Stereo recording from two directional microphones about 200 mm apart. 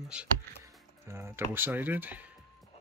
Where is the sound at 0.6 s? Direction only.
15° right (ahead or behind).